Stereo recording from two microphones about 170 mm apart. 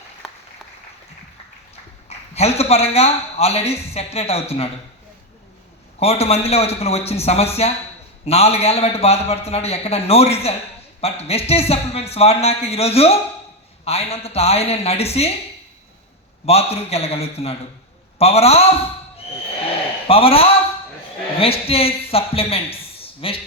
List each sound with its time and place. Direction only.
2.0 s a man's voice: 35° left (ahead or behind)
6.0 s a man's voice: 35° left (ahead or behind)
16.5 s a man's voice: 35° left (ahead or behind)
20.1 s a man's voice: 35° left (ahead or behind)